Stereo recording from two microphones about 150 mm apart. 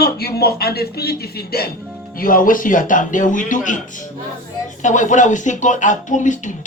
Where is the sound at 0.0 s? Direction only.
90° left.